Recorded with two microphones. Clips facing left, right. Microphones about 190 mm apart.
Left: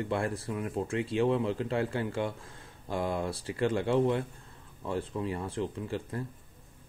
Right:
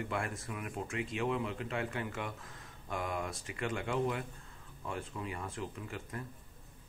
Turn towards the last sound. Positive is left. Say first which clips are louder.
# left 8 dB
turn(degrees=30)  # may be behind; listen again after turning